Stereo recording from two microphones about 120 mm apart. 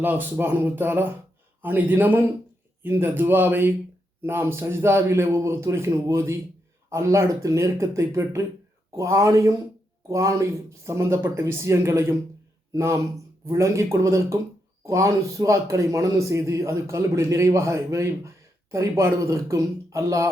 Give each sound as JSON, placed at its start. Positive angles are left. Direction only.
{"t": 0.0, "sound": "a man's voice", "side_deg": -15}